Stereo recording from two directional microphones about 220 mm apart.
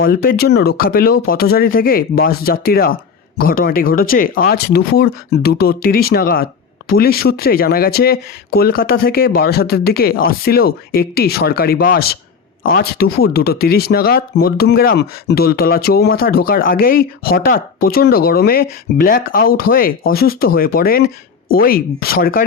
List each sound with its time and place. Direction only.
0.1 s speech: 45° left (ahead or behind)